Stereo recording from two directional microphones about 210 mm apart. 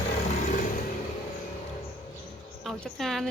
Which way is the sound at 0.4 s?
40° left (ahead or behind).